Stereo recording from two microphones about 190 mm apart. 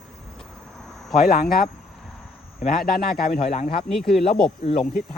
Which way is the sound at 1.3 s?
50° left (ahead or behind).